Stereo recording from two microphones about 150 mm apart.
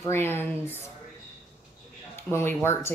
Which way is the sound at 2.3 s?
15° left (ahead or behind).